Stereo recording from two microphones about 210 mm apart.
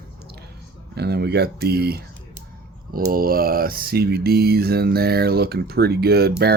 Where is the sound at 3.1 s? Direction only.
45° right (ahead or behind).